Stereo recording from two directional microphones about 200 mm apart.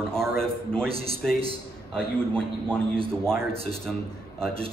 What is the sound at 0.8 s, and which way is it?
Speech, 30° right (ahead or behind).